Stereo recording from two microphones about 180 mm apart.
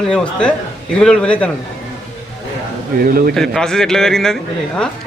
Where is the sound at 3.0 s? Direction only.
55° right (ahead or behind).